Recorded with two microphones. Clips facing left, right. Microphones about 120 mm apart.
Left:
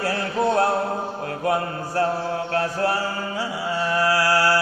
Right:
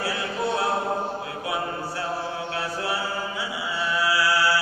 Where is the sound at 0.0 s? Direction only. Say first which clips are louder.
Left 5 dB; 45° left (ahead or behind).